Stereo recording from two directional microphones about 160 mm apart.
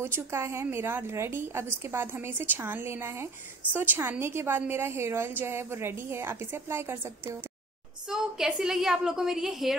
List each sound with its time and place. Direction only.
0.0 s a woman's voice: 15° right (ahead or behind)
8.1 s a woman's voice: 5° right (ahead or behind)